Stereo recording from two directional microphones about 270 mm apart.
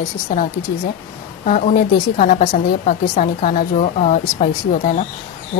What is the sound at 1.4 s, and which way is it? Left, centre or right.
Speech, left.